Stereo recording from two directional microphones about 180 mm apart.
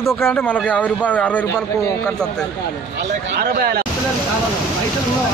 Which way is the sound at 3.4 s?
55° right (ahead or behind).